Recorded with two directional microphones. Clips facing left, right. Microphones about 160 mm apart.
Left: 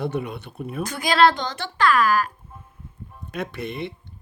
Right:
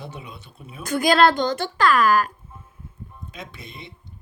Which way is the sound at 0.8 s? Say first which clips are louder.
Right 1 dB; 50° right (ahead or behind).